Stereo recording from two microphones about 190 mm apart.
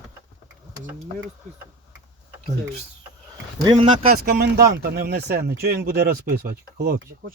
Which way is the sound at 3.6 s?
30° right (ahead or behind).